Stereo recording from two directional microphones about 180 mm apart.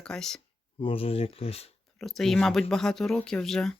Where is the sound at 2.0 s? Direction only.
Centre (ahead or behind).